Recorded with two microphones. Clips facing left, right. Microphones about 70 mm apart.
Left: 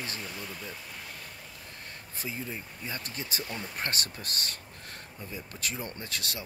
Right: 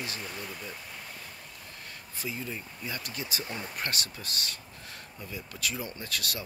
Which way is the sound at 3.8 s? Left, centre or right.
Left.